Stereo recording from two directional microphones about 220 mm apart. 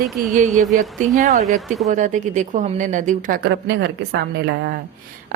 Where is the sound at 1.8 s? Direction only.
35° right (ahead or behind); by 4.2 s 50° right (ahead or behind).